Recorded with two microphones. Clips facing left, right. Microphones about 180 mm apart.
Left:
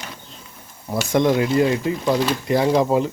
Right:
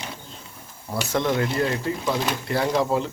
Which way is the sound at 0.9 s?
15° left (ahead or behind).